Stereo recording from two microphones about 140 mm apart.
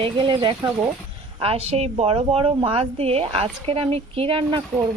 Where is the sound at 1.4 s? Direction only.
45° right (ahead or behind).